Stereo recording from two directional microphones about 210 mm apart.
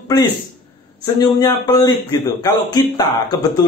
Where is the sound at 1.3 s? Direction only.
15° left (ahead or behind).